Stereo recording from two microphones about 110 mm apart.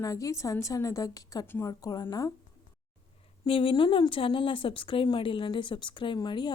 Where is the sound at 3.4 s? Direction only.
55° left (ahead or behind).